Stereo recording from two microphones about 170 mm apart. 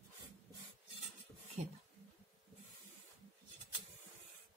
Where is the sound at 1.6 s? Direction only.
40° right (ahead or behind).